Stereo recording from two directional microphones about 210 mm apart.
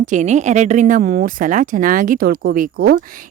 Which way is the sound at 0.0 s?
35° right (ahead or behind).